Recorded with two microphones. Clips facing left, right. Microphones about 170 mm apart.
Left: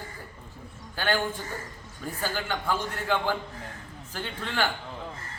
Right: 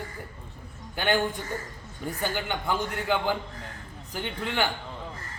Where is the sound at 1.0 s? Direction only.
20° right (ahead or behind).